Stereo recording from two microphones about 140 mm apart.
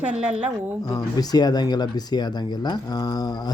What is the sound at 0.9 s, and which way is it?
Speech, 25° left (ahead or behind).